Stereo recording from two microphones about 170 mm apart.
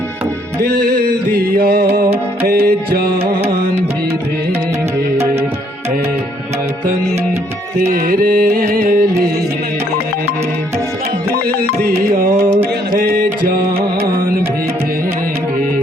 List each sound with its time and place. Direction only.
1.3 s music: 65° right (ahead or behind)
8.0 s music: 60° right (ahead or behind)
12.0 s music: 60° right (ahead or behind)